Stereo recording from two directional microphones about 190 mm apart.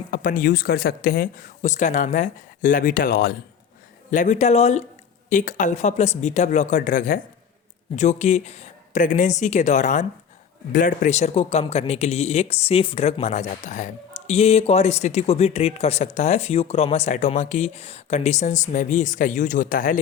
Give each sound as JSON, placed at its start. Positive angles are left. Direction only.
{"t": 0.1, "sound": "speech", "side_deg": 45}